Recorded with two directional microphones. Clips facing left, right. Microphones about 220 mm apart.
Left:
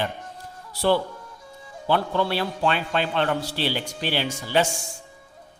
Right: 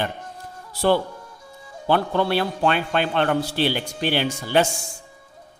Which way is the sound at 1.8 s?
50° right (ahead or behind).